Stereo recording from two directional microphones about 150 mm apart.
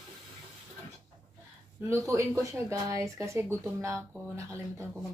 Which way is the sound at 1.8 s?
15° right (ahead or behind).